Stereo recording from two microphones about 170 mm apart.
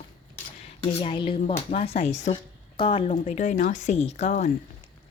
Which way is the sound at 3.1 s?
45° left (ahead or behind).